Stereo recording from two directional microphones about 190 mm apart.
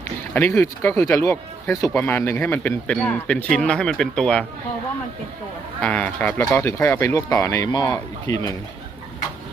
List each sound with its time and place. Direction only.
0.3 s speech: 10° left (ahead or behind)
5.8 s speech: 5° left (ahead or behind)